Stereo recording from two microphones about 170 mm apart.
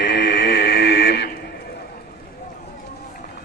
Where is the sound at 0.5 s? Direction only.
75° left (ahead or behind); by 1.3 s 90° left.